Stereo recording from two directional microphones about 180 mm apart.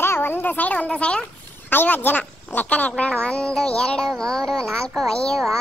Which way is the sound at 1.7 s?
10° left (ahead or behind).